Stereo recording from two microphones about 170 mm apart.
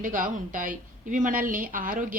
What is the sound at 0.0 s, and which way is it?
A woman's voice, 50° right (ahead or behind).